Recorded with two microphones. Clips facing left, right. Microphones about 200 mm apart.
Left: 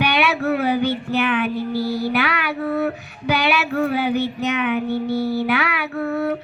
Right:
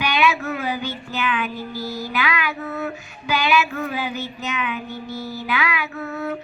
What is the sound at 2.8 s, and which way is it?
Female singing, 60° left (ahead or behind).